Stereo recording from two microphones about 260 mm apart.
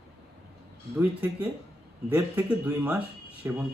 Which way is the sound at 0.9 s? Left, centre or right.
Centre.